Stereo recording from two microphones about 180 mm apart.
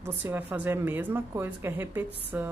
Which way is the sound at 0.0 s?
10° right (ahead or behind).